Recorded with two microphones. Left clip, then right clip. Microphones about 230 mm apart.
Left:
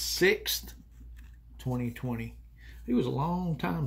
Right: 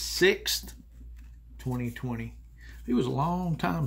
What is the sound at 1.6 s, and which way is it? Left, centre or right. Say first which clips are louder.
Speech: even; centre.